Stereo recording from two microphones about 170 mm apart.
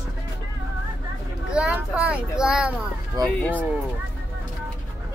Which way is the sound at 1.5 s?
5° right (ahead or behind).